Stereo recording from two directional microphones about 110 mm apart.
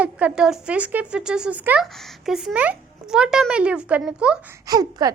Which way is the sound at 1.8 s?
5° right (ahead or behind).